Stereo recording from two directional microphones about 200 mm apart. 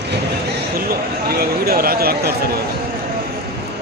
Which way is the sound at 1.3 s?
50° right (ahead or behind).